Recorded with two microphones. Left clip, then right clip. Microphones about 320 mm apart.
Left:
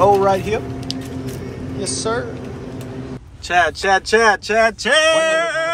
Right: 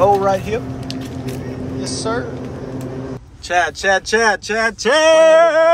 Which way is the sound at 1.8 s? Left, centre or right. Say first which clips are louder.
Left 1 dB; centre.